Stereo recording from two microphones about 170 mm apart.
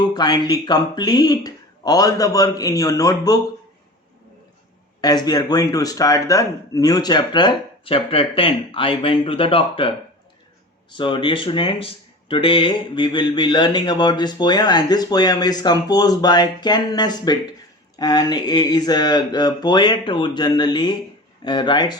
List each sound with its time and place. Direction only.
0.1 s speech: 25° left (ahead or behind)
4.9 s speech: 25° left (ahead or behind)
10.9 s speech: 30° left (ahead or behind)